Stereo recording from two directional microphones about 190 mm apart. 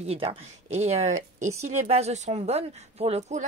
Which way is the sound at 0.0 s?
30° right (ahead or behind).